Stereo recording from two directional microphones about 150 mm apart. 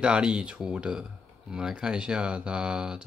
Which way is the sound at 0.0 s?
5° right (ahead or behind).